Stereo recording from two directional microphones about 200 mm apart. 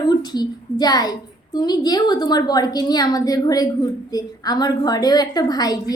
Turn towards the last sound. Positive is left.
turn(degrees=20)  # may be behind; listen again after turning